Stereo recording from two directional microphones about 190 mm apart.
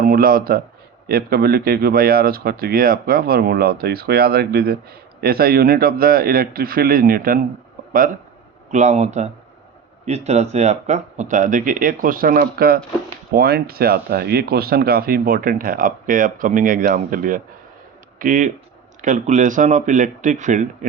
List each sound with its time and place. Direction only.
0.0 s a man's voice: 50° right (ahead or behind)
8.7 s speech: 40° right (ahead or behind)